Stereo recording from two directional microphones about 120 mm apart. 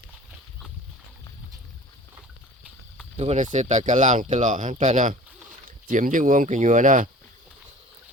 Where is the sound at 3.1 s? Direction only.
65° right (ahead or behind); by 7.0 s 90° right.